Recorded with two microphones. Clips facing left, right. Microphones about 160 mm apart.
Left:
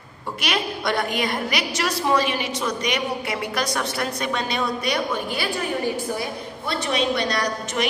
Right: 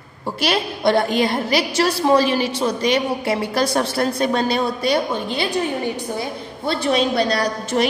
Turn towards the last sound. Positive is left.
turn(degrees=-30)  # may be behind; listen again after turning